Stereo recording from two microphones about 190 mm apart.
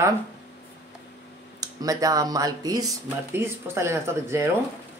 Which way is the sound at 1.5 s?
20° right (ahead or behind).